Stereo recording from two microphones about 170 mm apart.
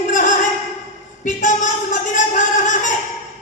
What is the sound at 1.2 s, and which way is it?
Speech, 45° left (ahead or behind).